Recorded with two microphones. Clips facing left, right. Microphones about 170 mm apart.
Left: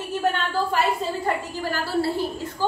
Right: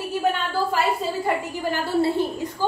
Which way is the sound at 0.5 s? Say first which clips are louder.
Even; centre (ahead or behind).